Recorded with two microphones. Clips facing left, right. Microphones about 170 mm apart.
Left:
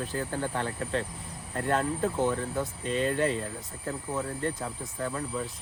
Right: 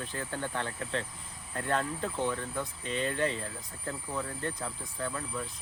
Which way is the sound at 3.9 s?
25° left (ahead or behind).